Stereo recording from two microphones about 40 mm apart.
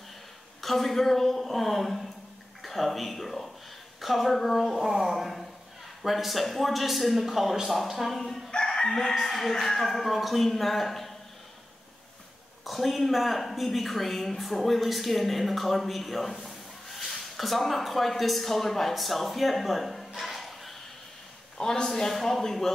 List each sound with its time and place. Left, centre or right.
0.6 s a man's voice: centre
8.6 s crowing: centre
9.2 s a man's voice: centre
12.6 s a woman's voice: centre
21.5 s a man's voice: centre